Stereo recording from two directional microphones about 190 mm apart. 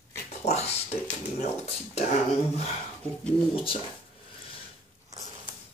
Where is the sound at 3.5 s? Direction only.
30° left (ahead or behind).